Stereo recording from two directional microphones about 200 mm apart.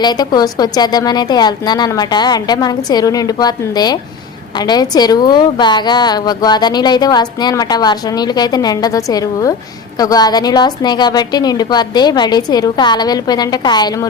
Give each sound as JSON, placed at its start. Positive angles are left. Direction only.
{"t": 0.0, "sound": "a woman's voice", "side_deg": 20}